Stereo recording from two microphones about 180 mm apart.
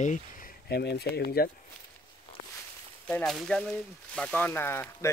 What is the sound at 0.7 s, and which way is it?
Speech, 65° left (ahead or behind).